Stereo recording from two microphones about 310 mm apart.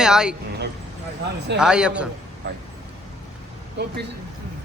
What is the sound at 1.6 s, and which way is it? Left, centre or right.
Speech, centre.